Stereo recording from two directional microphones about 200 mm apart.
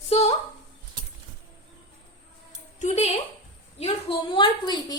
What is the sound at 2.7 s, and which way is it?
A woman's voice, 35° left (ahead or behind).